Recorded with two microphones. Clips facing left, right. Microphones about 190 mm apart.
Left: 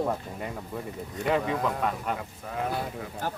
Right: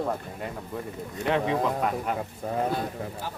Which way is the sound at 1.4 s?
25° right (ahead or behind).